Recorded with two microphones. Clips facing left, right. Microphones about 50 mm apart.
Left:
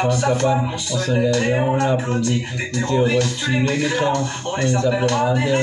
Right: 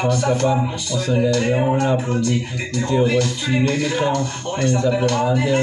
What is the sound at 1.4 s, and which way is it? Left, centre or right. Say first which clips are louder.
Speech: even; centre.